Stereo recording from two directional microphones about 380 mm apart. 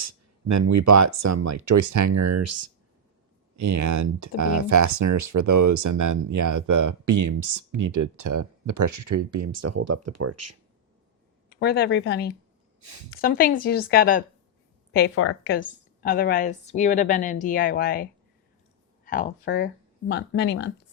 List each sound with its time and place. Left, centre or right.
0.0 s speech: right
11.4 s a woman's voice: left